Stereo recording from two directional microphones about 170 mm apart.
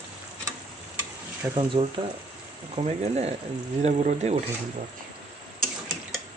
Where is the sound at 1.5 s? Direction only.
30° right (ahead or behind).